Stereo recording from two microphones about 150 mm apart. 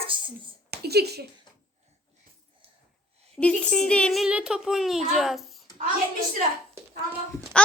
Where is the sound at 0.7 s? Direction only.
90° right.